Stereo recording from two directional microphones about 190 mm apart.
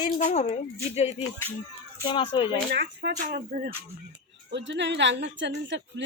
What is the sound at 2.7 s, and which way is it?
Speech, 60° right (ahead or behind).